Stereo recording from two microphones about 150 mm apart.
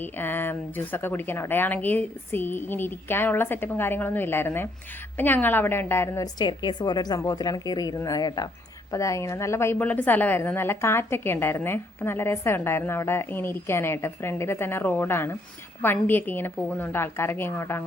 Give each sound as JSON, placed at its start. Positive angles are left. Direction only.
{"t": 0.0, "sound": "a woman's voice", "side_deg": 15}
{"t": 6.4, "sound": "a woman's voice", "side_deg": 30}